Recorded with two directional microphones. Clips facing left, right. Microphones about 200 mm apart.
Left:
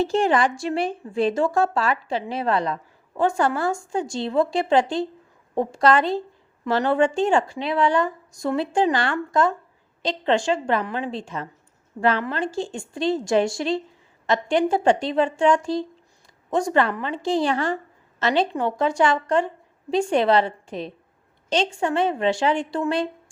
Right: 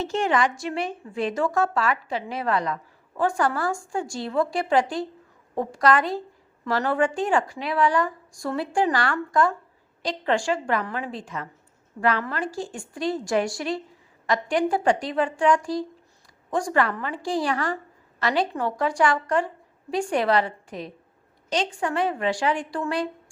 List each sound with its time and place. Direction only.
0.0 s speech: 35° left (ahead or behind)